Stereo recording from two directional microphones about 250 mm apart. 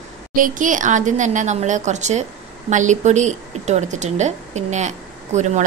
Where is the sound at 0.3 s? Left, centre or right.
Right.